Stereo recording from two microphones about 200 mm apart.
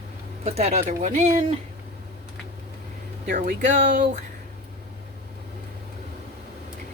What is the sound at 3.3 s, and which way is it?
Speech, 40° right (ahead or behind).